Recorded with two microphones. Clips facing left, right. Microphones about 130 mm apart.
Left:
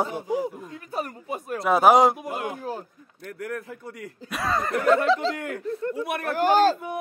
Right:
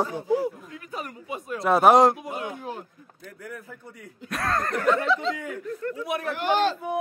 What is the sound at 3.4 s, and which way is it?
Speech, 75° left (ahead or behind).